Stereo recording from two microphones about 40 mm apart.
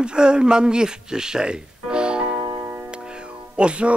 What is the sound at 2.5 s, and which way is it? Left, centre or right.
Music, right.